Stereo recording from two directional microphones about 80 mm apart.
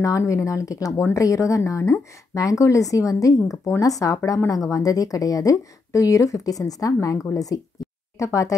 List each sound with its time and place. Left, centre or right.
0.0 s speech: left